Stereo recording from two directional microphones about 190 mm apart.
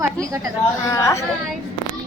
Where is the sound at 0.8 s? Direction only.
15° left (ahead or behind).